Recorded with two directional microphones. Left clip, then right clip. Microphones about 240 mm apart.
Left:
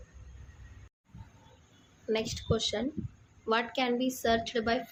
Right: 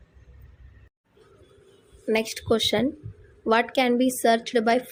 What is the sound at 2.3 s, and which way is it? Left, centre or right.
A woman's voice, right.